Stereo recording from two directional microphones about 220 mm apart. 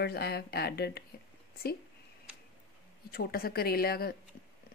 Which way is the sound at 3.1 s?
45° left (ahead or behind).